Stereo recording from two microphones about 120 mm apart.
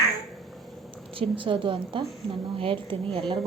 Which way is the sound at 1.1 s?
45° right (ahead or behind).